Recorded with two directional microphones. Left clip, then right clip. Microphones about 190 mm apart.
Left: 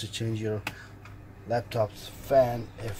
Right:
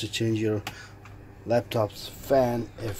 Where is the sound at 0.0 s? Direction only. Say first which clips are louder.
Right 6 dB; 50° right (ahead or behind).